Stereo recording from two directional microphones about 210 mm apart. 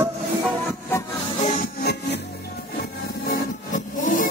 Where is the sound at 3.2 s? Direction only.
45° left (ahead or behind).